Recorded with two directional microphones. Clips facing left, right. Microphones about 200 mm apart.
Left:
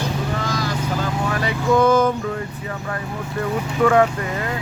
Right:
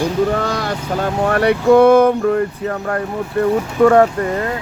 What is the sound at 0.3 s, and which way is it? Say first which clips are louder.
Vehicle: right 5 dB; 60° right (ahead or behind).